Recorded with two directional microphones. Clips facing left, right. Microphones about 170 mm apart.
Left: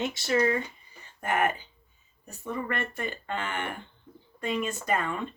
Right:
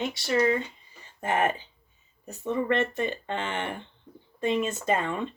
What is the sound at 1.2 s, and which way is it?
Speech, 25° right (ahead or behind).